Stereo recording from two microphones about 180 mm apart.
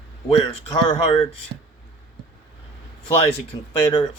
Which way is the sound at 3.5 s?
25° left (ahead or behind).